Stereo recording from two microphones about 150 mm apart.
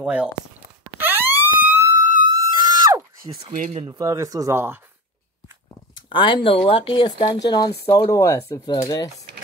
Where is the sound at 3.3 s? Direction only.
25° right (ahead or behind).